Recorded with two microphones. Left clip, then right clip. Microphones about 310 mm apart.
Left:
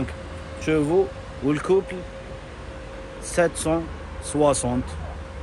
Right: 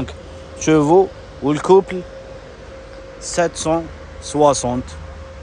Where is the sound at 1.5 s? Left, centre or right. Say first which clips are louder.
Right 8 dB; centre.